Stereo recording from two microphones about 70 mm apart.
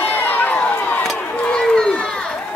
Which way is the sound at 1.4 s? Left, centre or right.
Centre.